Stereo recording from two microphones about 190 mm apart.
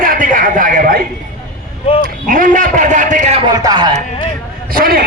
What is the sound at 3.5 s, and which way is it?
Speech, 20° right (ahead or behind).